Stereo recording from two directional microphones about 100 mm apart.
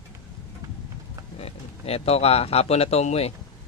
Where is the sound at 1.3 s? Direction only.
90° left.